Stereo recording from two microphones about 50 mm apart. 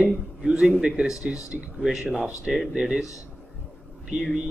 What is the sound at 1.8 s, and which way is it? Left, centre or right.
Speech, centre.